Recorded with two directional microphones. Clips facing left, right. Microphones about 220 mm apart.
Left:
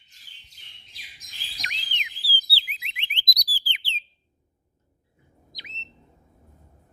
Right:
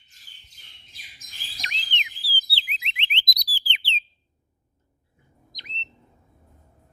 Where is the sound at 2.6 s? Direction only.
20° right (ahead or behind).